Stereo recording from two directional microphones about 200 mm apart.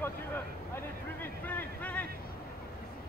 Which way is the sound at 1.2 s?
10° left (ahead or behind).